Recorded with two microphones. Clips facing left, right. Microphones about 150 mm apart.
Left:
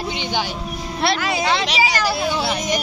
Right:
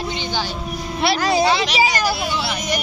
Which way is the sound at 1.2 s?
35° right (ahead or behind).